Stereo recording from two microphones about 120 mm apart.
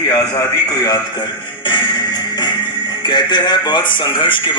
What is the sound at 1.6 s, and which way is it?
Music, 40° left (ahead or behind).